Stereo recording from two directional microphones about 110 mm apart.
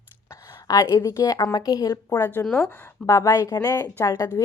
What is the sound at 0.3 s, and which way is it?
A woman's voice, 30° left (ahead or behind).